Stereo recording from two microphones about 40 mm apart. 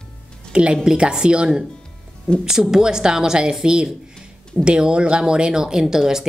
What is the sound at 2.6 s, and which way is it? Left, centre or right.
A woman's voice, centre.